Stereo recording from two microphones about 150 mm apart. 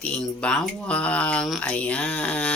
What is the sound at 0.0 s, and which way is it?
Speech, 5° left (ahead or behind).